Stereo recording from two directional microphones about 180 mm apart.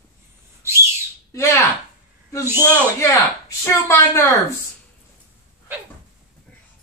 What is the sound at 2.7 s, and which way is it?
Speech, 15° left (ahead or behind).